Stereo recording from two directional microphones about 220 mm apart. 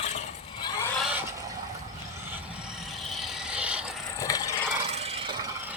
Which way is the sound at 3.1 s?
Centre (ahead or behind).